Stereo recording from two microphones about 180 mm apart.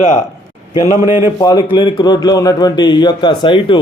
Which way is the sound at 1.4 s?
25° left (ahead or behind).